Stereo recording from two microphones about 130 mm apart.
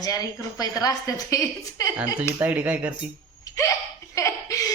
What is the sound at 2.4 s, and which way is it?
Speech, 10° right (ahead or behind).